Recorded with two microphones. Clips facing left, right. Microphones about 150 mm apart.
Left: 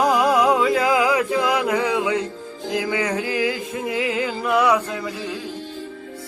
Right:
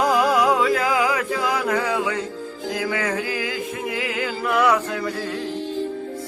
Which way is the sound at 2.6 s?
20° left (ahead or behind).